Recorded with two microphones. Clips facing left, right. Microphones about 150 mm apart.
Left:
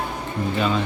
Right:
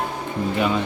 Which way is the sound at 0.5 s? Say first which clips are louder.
Right 1 dB; 15° right (ahead or behind).